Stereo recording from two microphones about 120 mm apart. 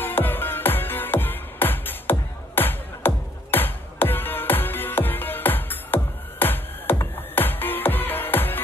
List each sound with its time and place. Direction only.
0.0 s music: 15° left (ahead or behind)